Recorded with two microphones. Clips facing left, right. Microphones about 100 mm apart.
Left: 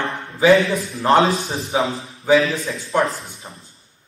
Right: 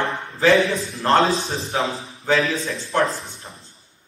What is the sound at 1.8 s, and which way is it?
Speech, 30° right (ahead or behind).